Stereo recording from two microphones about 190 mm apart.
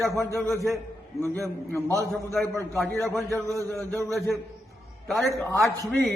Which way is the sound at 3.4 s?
15° right (ahead or behind).